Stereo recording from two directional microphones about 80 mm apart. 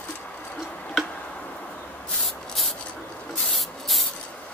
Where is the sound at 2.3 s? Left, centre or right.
Centre.